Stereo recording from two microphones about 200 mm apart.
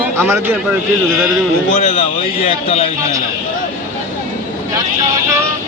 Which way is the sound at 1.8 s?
30° left (ahead or behind).